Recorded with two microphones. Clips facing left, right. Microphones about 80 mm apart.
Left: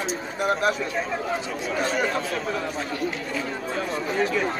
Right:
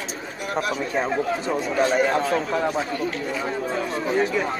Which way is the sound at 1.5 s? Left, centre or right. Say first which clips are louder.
Right 5 dB; right.